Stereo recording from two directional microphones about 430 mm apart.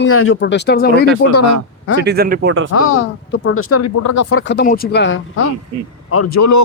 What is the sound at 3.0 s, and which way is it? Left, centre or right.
Speech, left.